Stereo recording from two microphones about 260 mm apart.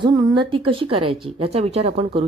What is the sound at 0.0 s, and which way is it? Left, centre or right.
Speech, centre.